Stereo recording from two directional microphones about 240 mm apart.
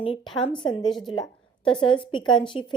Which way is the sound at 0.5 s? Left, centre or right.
Centre.